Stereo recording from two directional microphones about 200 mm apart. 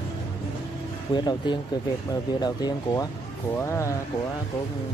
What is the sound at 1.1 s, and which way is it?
Speech, 20° left (ahead or behind).